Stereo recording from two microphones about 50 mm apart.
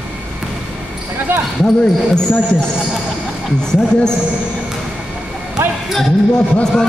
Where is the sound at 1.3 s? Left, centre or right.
Right.